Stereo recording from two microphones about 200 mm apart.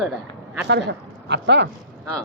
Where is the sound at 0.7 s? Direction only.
60° right (ahead or behind).